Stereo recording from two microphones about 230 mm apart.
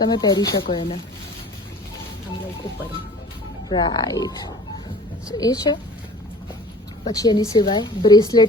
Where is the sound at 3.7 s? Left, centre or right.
Centre.